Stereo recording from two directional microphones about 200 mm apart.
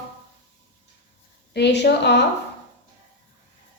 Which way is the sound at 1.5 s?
60° left (ahead or behind).